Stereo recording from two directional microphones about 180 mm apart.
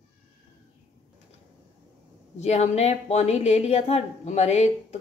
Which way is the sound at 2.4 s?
35° left (ahead or behind).